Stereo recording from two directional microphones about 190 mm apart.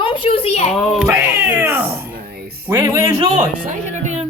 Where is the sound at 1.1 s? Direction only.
10° right (ahead or behind).